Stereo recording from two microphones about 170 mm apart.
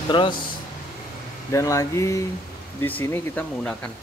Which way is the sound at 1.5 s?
20° left (ahead or behind).